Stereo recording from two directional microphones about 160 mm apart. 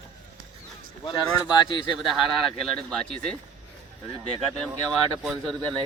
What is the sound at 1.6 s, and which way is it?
Speech, 30° left (ahead or behind).